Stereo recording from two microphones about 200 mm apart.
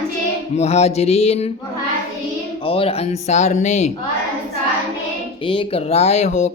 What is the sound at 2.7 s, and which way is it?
Speech, 30° left (ahead or behind).